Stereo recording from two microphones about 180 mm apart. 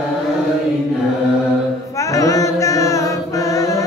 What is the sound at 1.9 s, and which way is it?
Chant, 15° left (ahead or behind).